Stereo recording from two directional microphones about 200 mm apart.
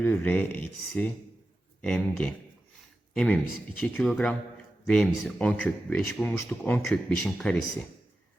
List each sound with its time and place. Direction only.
0.0 s speech: 10° left (ahead or behind)